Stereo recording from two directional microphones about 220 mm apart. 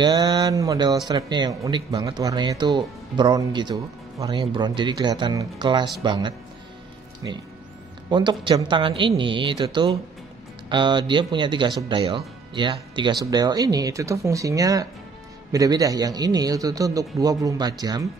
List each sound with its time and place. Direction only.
0.0 s a man's voice: 20° right (ahead or behind)